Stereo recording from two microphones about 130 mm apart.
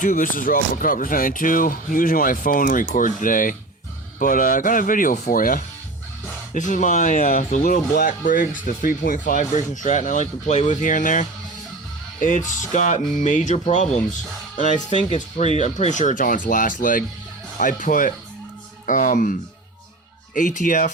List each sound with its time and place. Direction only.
0.0 s speech: 90° left
6.5 s speech: 75° left (ahead or behind); by 9.4 s 90° left
9.4 s speech: 65° left (ahead or behind); by 20.9 s 85° left